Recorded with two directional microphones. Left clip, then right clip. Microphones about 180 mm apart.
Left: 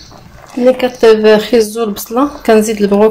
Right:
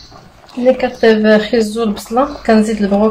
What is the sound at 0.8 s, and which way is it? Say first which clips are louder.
Speech: left 4 dB; 50° left (ahead or behind).